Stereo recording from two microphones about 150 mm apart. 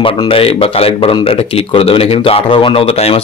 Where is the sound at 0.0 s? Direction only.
35° left (ahead or behind).